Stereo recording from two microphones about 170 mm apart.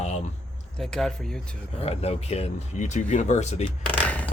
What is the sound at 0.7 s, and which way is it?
Speech, 5° left (ahead or behind).